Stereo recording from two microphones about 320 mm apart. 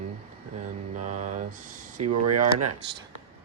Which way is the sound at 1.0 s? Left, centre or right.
Right.